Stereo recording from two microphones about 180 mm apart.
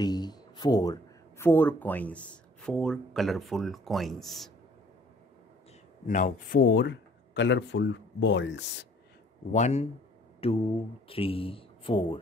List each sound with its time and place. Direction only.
0.0 s a sound: 20° left (ahead or behind)
1.4 s speech: 10° left (ahead or behind)
6.0 s speech: 45° left (ahead or behind); by 8.6 s 85° left
9.5 s speech: 40° left (ahead or behind)